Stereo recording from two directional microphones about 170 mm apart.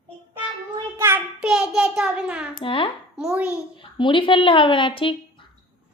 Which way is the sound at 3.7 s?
30° left (ahead or behind).